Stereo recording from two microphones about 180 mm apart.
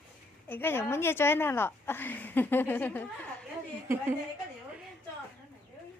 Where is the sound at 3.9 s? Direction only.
15° right (ahead or behind).